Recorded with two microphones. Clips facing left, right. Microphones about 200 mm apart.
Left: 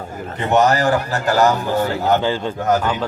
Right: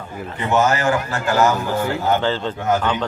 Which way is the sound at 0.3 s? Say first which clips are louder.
Left 3 dB; 40° left (ahead or behind).